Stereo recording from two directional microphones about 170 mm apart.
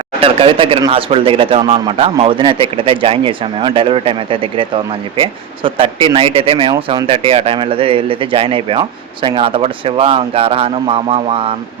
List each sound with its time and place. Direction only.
0.2 s speech: 35° right (ahead or behind)